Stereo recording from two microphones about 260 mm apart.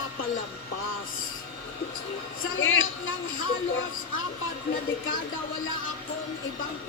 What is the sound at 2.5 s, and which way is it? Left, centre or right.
Speech, left.